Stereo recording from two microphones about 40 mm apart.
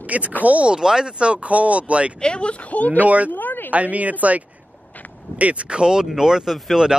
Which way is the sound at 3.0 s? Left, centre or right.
Right.